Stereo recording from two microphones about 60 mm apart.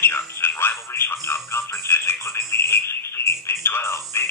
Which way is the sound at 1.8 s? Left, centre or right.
Left.